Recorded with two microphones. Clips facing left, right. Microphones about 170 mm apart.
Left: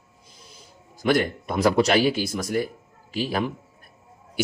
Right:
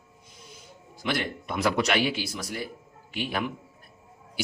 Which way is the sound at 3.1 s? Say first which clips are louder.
Left 5 dB; 35° left (ahead or behind).